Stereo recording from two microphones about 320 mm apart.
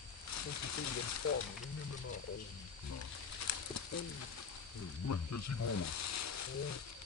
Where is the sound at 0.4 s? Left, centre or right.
Left.